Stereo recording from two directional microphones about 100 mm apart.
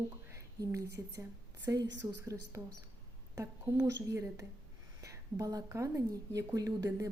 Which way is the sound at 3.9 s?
35° right (ahead or behind).